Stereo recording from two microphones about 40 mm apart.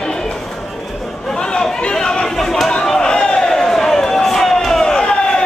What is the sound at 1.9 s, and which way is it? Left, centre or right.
Chatter, centre.